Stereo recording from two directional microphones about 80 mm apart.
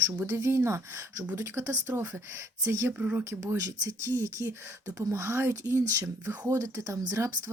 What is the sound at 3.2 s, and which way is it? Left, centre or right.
Speech, right.